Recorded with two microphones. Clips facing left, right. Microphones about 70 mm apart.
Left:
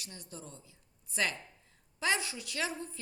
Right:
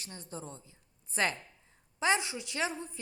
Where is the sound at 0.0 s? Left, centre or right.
Right.